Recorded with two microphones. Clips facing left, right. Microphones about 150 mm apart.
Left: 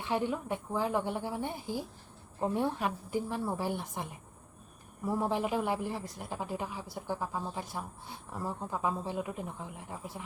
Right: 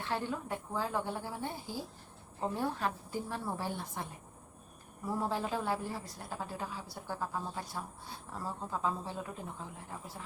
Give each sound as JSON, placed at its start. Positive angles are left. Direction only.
{"t": 0.0, "sound": "a woman's voice", "side_deg": 15}
{"t": 5.1, "sound": "a woman's voice", "side_deg": 15}